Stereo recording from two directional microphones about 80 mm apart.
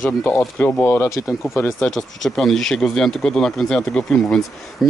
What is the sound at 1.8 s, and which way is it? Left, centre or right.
Speech, centre.